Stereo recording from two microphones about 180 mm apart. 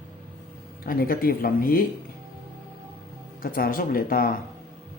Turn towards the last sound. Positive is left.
turn(degrees=55)  # may be behind; listen again after turning